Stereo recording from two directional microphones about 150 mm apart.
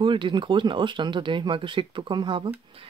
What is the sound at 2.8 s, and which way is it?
Music, 40° right (ahead or behind).